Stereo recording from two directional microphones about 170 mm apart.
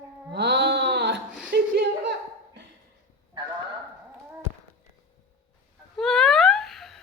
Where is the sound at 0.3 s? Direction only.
80° right.